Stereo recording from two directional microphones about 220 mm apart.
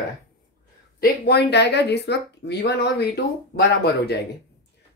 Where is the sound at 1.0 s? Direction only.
50° left (ahead or behind).